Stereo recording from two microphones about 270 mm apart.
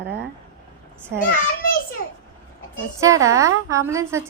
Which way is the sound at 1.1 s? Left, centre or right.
Right.